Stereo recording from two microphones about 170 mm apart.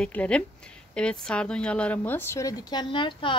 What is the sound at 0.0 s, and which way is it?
A woman's voice, 5° left (ahead or behind).